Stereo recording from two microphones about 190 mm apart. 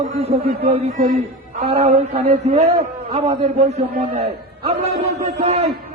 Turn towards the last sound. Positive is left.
turn(degrees=-35)  # may be behind; listen again after turning